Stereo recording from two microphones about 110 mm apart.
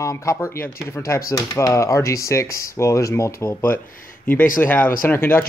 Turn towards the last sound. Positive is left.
turn(degrees=20)  # may be behind; listen again after turning